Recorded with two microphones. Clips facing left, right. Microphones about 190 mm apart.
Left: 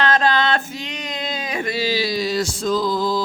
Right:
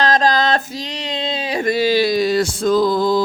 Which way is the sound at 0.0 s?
35° right (ahead or behind).